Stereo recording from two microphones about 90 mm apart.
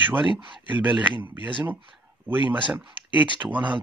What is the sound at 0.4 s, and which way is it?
Speech, 65° right (ahead or behind).